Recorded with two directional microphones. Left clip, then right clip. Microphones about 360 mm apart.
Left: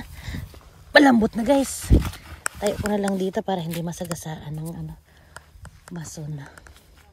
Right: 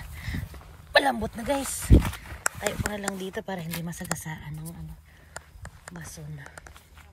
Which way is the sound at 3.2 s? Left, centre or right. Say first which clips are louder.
Left 9 dB; left.